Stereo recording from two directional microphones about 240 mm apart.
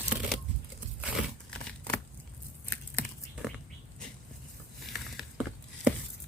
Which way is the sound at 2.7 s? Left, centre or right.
Centre.